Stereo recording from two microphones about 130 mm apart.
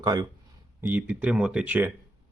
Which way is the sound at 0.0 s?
30° right (ahead or behind).